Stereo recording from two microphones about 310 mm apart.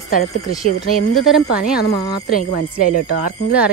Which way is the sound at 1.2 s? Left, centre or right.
Centre.